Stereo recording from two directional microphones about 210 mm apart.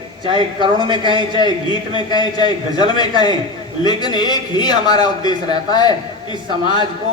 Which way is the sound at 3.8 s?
20° left (ahead or behind).